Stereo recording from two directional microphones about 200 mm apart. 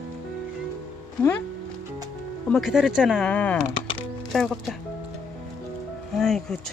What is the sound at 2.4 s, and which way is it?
Speech, centre (ahead or behind).